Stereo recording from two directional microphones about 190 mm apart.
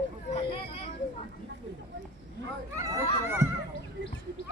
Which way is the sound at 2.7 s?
15° right (ahead or behind).